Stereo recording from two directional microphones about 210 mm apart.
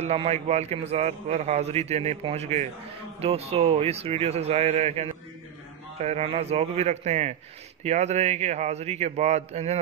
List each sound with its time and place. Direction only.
0.0 s a man's voice: 30° right (ahead or behind)